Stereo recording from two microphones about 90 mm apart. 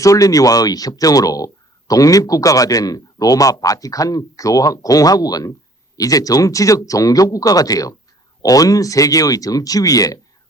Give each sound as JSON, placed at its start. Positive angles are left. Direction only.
{"t": 0.0, "sound": "speech", "side_deg": 40}